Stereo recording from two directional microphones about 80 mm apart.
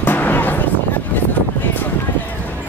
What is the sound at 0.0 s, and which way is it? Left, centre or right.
Music, left.